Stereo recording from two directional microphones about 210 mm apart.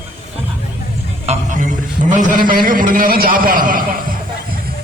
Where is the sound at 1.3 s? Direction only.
35° right (ahead or behind).